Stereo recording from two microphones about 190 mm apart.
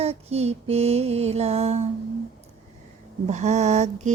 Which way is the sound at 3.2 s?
35° right (ahead or behind).